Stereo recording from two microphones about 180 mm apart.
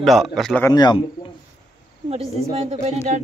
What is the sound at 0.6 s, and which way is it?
Speech, 20° left (ahead or behind).